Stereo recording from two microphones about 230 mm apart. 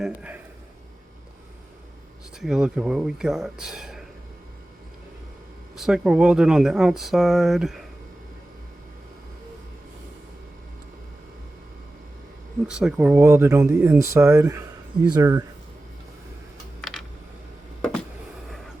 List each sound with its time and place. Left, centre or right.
0.0 s speech: centre
2.4 s speech: centre
5.7 s speech: centre
12.6 s speech: centre
16.8 s computer keyboard: centre